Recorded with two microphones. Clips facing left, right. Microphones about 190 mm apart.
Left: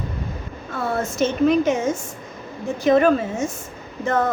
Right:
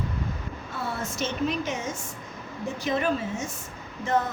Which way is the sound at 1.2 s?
50° left (ahead or behind).